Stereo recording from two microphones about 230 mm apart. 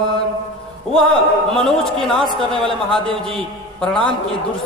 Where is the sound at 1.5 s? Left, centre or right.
Centre.